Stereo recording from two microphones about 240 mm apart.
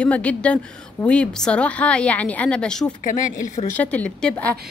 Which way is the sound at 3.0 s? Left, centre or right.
Left.